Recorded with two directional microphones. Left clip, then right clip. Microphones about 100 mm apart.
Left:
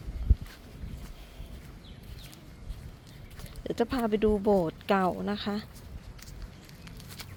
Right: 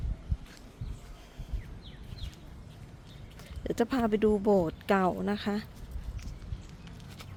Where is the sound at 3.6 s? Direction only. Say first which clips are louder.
Even; 30° right (ahead or behind).